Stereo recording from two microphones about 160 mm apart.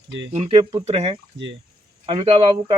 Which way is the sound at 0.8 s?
40° right (ahead or behind).